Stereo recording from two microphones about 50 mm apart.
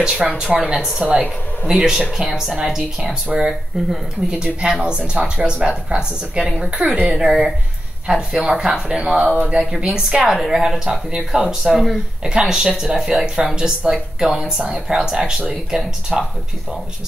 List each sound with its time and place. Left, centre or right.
0.0 s speech: centre
0.5 s speech: right
0.7 s speech: centre
14.9 s speech: centre